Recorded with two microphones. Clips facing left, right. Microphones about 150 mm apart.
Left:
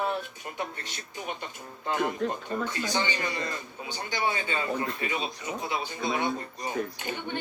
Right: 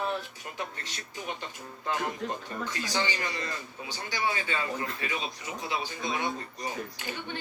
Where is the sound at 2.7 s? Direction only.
25° left (ahead or behind).